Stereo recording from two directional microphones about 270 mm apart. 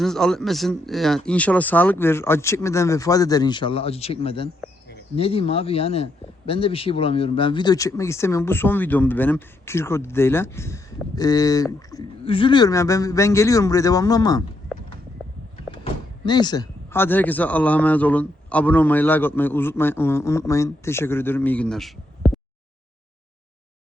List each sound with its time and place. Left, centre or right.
0.0 s a man's voice: centre
15.8 s a man's voice: centre